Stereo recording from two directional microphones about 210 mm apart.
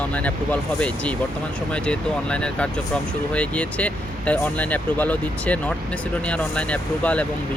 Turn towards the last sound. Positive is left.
turn(degrees=5)  # may be behind; listen again after turning